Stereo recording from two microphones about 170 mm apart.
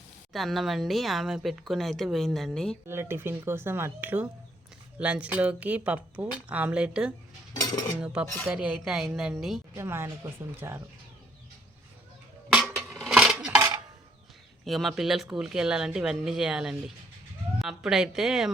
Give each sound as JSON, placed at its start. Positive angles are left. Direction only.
{"t": 0.3, "sound": "speech", "side_deg": 0}
{"t": 2.8, "sound": "a woman's voice", "side_deg": -15}
{"t": 7.5, "sound": "cutlery", "side_deg": 25}
{"t": 8.0, "sound": "speech", "side_deg": -5}
{"t": 9.7, "sound": "a woman's voice", "side_deg": -15}
{"t": 12.5, "sound": "a sound", "side_deg": -5}
{"t": 13.0, "sound": "coin", "side_deg": 0}
{"t": 13.6, "sound": "a sound", "side_deg": -20}
{"t": 14.6, "sound": "speech", "side_deg": 0}